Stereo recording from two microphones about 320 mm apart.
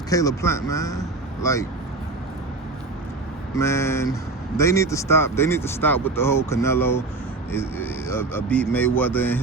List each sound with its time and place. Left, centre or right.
0.1 s speech: centre
3.5 s speech: centre